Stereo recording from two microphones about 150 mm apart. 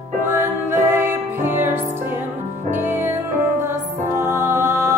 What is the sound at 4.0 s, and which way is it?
Music, 15° right (ahead or behind).